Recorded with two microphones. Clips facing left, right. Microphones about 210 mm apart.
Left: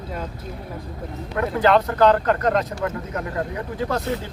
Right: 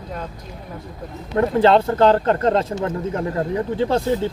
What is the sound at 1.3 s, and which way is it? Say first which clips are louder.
Speech: right 4 dB; 30° right (ahead or behind).